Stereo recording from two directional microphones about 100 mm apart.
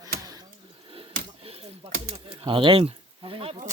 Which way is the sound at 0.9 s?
65° right (ahead or behind).